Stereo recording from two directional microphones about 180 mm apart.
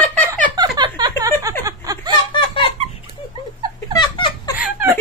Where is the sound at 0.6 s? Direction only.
25° right (ahead or behind).